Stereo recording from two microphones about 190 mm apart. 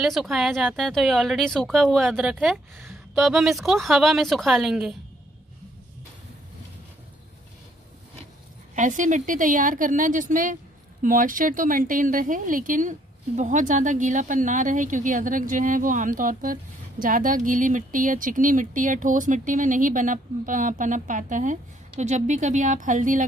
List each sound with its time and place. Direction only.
0.0 s a woman's voice: centre (ahead or behind)
8.7 s speech: 40° right (ahead or behind)